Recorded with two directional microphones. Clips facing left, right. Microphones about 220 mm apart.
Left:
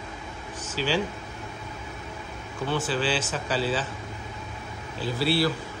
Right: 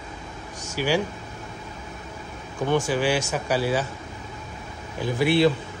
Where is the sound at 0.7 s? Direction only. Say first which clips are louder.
Right 3 dB; 10° right (ahead or behind).